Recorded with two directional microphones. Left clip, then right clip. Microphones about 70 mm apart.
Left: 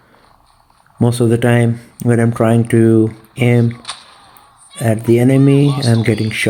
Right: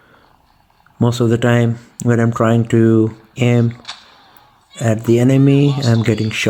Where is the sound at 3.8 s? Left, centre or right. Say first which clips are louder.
Left 3 dB; left.